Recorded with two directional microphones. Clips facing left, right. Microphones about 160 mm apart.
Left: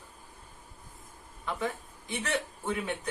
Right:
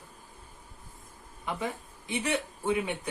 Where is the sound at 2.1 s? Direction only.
15° right (ahead or behind).